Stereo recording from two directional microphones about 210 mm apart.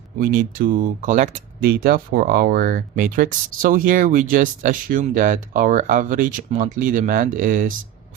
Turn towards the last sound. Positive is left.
turn(degrees=-40)  # may be behind; listen again after turning